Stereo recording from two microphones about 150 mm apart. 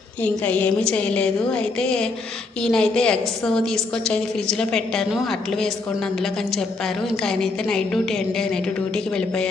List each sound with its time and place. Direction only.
0.2 s a woman's voice: 10° left (ahead or behind)